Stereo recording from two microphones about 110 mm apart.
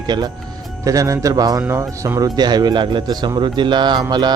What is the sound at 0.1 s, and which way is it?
Speech, 40° right (ahead or behind).